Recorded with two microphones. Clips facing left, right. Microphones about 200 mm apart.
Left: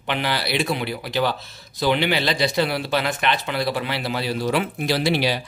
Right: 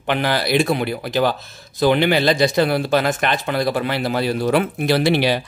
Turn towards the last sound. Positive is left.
turn(degrees=-60)  # may be behind; listen again after turning